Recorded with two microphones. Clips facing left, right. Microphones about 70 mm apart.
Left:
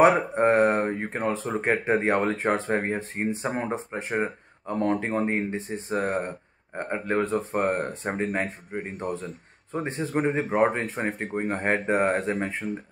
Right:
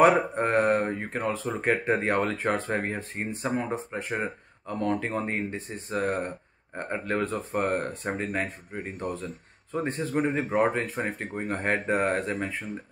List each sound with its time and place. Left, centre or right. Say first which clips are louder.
0.0 s speech: left 2 dB; left